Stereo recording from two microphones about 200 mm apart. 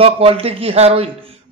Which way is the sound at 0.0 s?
30° right (ahead or behind).